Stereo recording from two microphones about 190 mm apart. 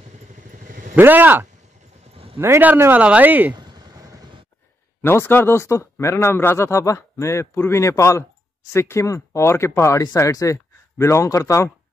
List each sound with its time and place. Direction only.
0.4 s vehicle: 45° right (ahead or behind)
0.9 s speech: 10° right (ahead or behind)
3.5 s vehicle: 20° right (ahead or behind)
5.0 s speech: 10° left (ahead or behind)